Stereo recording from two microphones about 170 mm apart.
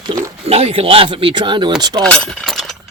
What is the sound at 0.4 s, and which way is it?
Speech, 35° right (ahead or behind).